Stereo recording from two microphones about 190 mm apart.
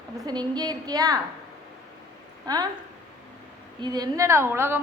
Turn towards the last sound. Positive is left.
turn(degrees=-10)  # may be behind; listen again after turning